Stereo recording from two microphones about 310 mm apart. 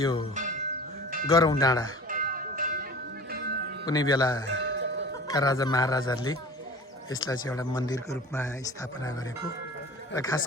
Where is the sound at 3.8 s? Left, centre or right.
Centre.